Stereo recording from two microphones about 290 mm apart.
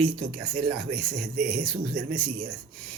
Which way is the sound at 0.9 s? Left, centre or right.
Right.